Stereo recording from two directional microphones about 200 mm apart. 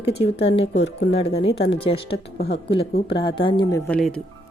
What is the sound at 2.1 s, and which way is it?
Speech, 55° left (ahead or behind).